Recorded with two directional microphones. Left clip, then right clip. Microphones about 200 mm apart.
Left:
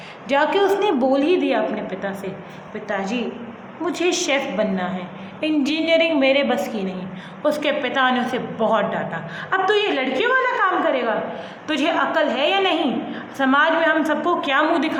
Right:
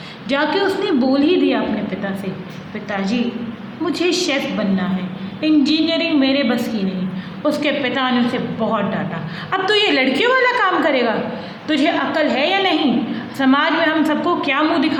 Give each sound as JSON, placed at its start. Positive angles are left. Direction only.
{"t": 0.3, "sound": "a woman's voice", "side_deg": 15}
{"t": 3.8, "sound": "a woman's voice", "side_deg": 15}
{"t": 9.5, "sound": "a woman's voice", "side_deg": 5}